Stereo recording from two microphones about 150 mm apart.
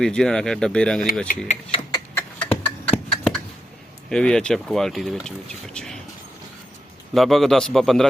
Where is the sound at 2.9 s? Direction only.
5° left (ahead or behind).